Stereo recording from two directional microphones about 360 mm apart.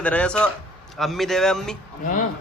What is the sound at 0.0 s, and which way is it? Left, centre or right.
A man's voice, centre.